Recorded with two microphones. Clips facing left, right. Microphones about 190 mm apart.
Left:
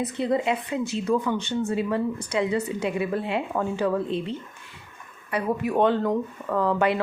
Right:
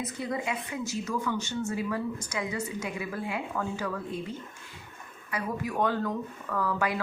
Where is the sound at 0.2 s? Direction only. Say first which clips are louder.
Left 9 dB; 70° left (ahead or behind).